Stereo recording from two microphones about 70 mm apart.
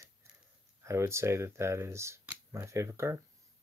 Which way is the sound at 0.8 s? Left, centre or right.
Right.